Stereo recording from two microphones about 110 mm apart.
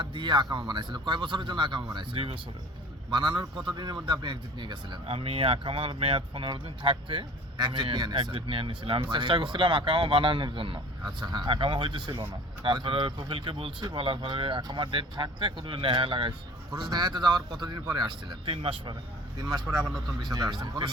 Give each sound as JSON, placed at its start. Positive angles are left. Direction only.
{"t": 0.0, "sound": "speech", "side_deg": -45}
{"t": 5.0, "sound": "speech", "side_deg": -60}
{"t": 8.3, "sound": "speech", "side_deg": -55}
{"t": 16.7, "sound": "speech", "side_deg": -40}
{"t": 18.4, "sound": "speech", "side_deg": -55}
{"t": 19.4, "sound": "speech", "side_deg": -35}